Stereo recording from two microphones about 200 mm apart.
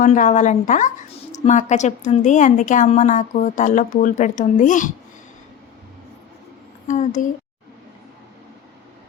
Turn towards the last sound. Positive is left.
turn(degrees=40)  # may be behind; listen again after turning